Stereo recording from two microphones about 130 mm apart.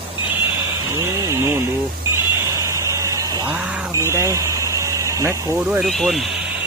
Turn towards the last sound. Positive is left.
turn(degrees=0)  # may be behind; listen again after turning